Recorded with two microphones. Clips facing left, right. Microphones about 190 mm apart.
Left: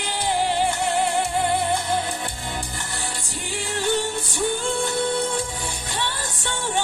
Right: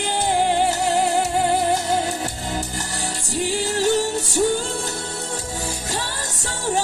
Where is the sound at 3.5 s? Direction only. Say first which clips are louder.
Right 4 dB; 40° right (ahead or behind).